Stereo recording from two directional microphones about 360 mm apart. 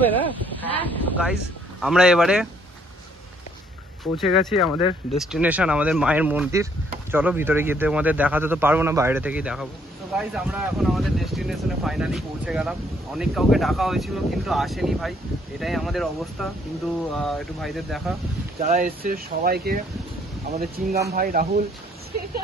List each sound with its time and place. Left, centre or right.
0.7 s speech: centre
4.2 s speech: centre
18.6 s speech: right